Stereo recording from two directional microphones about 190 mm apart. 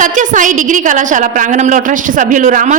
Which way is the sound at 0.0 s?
40° right (ahead or behind).